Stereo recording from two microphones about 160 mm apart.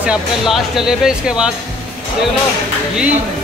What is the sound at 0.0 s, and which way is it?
Speech, 5° right (ahead or behind).